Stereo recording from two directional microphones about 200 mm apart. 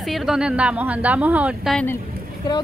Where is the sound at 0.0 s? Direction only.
Centre (ahead or behind).